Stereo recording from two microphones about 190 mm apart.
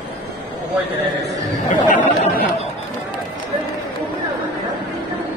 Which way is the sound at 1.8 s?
40° left (ahead or behind).